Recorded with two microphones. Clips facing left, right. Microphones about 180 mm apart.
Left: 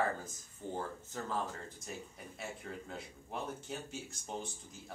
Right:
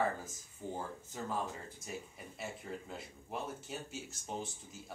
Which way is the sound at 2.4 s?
5° right (ahead or behind).